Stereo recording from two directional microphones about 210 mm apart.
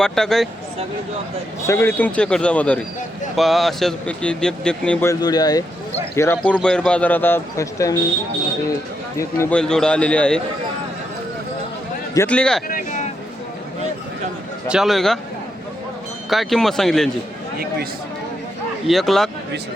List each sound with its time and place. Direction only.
0.0 s speech: centre (ahead or behind)
1.6 s a man's voice: 10° left (ahead or behind)
9.1 s speech: 10° left (ahead or behind)
12.1 s speech: 10° left (ahead or behind)
12.6 s a sound: 40° left (ahead or behind)
14.7 s speech: centre (ahead or behind)
16.3 s speech: centre (ahead or behind)
18.9 s speech: centre (ahead or behind)